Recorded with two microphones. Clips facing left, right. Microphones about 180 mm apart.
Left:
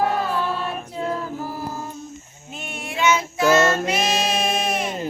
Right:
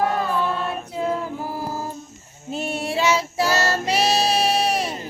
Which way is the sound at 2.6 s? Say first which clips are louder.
Right 3 dB; 35° right (ahead or behind).